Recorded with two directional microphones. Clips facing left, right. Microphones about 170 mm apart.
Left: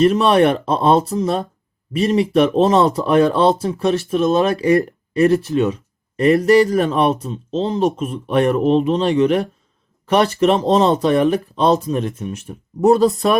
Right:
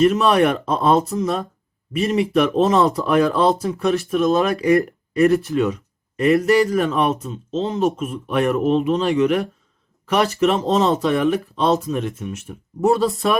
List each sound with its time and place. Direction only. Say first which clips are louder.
0.0 s speech: left 2 dB; 30° left (ahead or behind)
6.1 s speech: left 3 dB; 35° left (ahead or behind)